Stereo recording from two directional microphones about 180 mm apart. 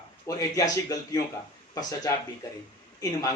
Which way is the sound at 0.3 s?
20° left (ahead or behind).